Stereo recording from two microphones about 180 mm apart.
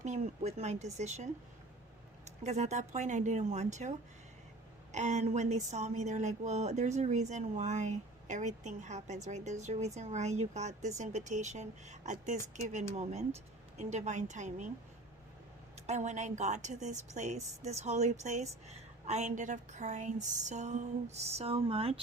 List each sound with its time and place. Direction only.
0.0 s speech: 40° right (ahead or behind)
2.4 s speech: 40° right (ahead or behind)
15.9 s speech: 40° right (ahead or behind)